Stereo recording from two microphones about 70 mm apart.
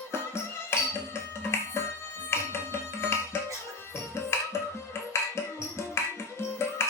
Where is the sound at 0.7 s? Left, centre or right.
Left.